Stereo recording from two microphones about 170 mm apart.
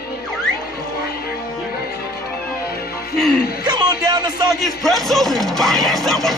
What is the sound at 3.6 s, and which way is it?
Speech, 25° right (ahead or behind).